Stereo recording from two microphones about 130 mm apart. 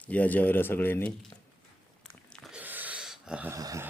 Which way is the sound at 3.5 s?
25° right (ahead or behind).